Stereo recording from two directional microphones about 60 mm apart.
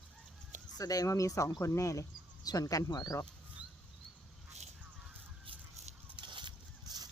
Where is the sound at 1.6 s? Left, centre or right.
Left.